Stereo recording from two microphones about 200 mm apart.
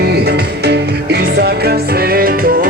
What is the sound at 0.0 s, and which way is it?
Music, 55° right (ahead or behind).